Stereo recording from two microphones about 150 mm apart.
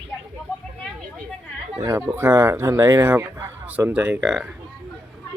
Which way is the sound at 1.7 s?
20° right (ahead or behind).